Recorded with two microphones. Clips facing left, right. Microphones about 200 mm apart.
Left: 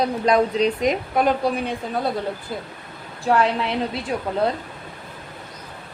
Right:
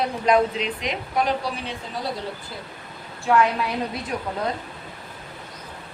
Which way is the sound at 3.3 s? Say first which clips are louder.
Left 1 dB; 35° left (ahead or behind).